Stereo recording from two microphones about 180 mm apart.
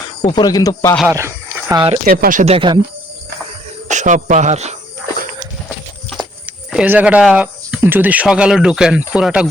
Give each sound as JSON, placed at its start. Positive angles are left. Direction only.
{"t": 0.2, "sound": "speech", "side_deg": 20}
{"t": 1.0, "sound": "speech", "side_deg": -15}
{"t": 1.7, "sound": "speech", "side_deg": -25}
{"t": 2.0, "sound": "speech", "side_deg": -55}
{"t": 2.4, "sound": "speech", "side_deg": -30}
{"t": 3.8, "sound": "speech", "side_deg": -45}
{"t": 6.4, "sound": "speech", "side_deg": -5}